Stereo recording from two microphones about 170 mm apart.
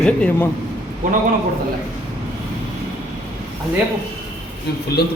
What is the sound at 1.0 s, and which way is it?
Speech, 50° right (ahead or behind).